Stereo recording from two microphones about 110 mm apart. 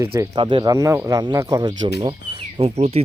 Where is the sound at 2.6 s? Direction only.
70° right (ahead or behind).